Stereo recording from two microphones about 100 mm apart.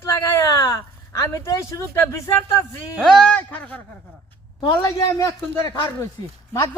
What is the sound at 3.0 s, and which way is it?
Speech, 5° left (ahead or behind).